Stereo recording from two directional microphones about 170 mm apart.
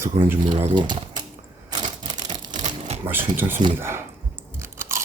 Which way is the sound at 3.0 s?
10° right (ahead or behind).